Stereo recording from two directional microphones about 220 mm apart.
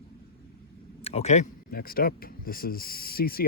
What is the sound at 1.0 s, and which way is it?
Speech, 30° left (ahead or behind).